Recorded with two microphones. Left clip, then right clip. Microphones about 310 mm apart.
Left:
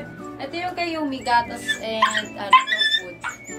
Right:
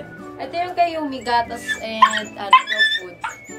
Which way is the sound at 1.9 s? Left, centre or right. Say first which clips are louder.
Right 6 dB; centre.